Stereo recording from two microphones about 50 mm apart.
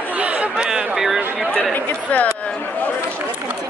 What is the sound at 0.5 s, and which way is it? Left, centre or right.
Speech, centre.